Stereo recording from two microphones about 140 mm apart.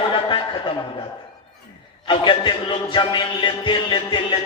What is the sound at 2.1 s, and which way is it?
A man's voice, 35° left (ahead or behind).